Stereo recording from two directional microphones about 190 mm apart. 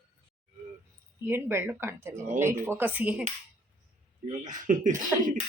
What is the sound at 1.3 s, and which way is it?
Speech, 10° right (ahead or behind).